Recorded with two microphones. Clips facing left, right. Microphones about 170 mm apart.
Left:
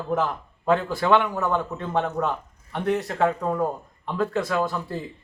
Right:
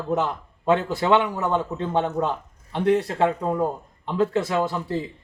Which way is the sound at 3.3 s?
15° right (ahead or behind).